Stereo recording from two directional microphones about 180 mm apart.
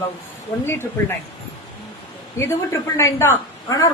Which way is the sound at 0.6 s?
15° left (ahead or behind).